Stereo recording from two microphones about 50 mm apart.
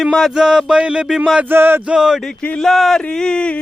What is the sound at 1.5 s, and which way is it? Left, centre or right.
Music, right.